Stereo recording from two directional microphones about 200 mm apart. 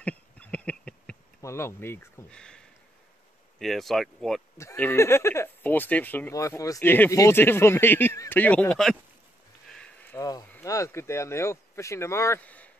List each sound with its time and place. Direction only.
0.0 s insect: 5° left (ahead or behind)
3.5 s speech: centre (ahead or behind)
4.6 s speech: 10° left (ahead or behind)
9.7 s a sound: 5° left (ahead or behind)
10.1 s speech: 15° left (ahead or behind)